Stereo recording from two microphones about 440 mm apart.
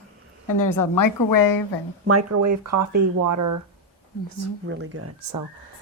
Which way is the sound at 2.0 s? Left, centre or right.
Right.